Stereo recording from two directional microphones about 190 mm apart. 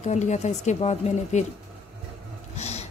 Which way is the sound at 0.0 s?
40° left (ahead or behind).